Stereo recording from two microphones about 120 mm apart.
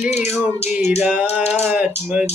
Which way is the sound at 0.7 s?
20° right (ahead or behind).